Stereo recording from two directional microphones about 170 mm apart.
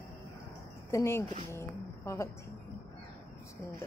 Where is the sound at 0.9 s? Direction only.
15° left (ahead or behind).